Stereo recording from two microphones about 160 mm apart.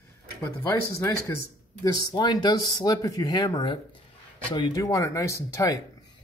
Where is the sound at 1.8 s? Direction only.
25° left (ahead or behind).